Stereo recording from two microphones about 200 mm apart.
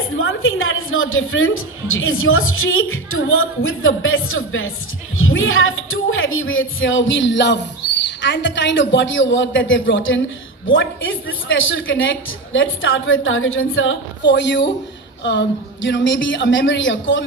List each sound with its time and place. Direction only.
0.2 s a woman's voice: 80° left